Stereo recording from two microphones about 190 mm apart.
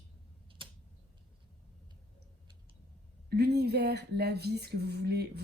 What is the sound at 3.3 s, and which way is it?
A woman's voice, 60° right (ahead or behind).